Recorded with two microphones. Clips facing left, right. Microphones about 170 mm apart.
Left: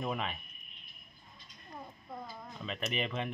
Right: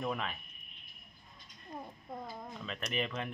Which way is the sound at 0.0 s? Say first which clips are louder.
Left 1 dB; 5° left (ahead or behind).